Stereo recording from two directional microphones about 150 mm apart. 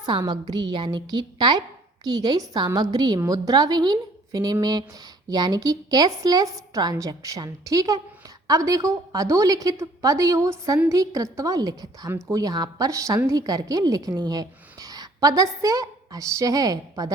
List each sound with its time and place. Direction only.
0.0 s a woman's voice: 25° right (ahead or behind)